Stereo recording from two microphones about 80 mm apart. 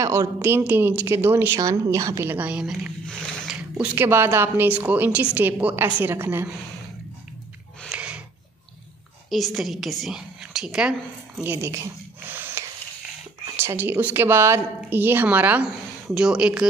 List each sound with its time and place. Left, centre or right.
0.0 s a woman's voice: right
1.6 s speech: right
2.2 s a woman's voice: centre
3.4 s a sound: centre
3.9 s a woman's voice: right
7.9 s a sound: centre
9.3 s a woman's voice: centre
11.4 s a woman's voice: right
12.3 s snort: right
13.6 s a woman's voice: right
16.2 s speech: centre